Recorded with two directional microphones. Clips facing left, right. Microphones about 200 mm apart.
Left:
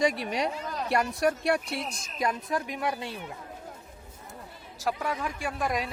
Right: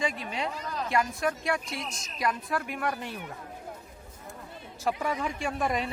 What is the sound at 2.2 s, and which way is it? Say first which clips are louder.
Speech: left 1 dB; 20° left (ahead or behind).